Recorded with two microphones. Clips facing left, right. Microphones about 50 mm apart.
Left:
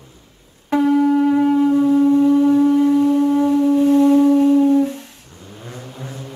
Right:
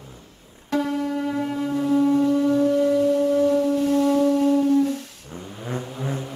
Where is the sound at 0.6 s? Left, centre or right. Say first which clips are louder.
Left 9 dB; centre.